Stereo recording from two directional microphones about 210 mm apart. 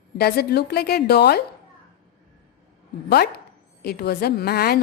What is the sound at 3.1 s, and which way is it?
Speech, 50° left (ahead or behind).